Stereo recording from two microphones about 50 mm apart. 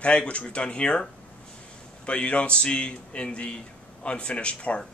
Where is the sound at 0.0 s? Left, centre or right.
Left.